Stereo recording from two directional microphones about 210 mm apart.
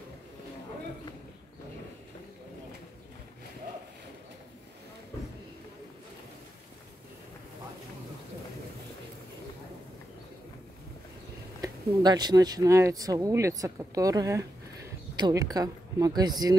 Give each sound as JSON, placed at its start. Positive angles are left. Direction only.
{"t": 11.6, "sound": "speech", "side_deg": -20}